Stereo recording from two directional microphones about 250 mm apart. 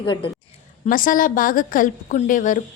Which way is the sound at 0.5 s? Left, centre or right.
Left.